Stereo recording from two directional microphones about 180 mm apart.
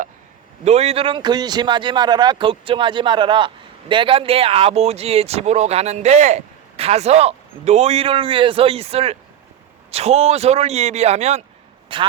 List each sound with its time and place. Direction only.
0.6 s a man's voice: 35° right (ahead or behind)